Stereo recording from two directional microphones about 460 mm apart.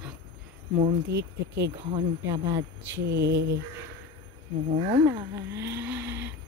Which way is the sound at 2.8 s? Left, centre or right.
Right.